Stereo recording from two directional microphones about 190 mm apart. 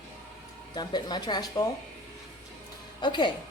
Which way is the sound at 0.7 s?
20° left (ahead or behind).